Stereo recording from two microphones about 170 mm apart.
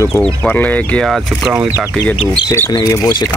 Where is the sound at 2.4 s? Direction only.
15° left (ahead or behind).